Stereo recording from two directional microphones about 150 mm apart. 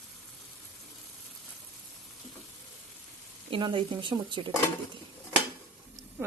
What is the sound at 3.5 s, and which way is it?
Speech, 35° right (ahead or behind).